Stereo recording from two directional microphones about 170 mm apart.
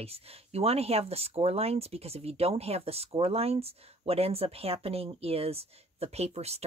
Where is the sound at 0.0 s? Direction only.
35° right (ahead or behind).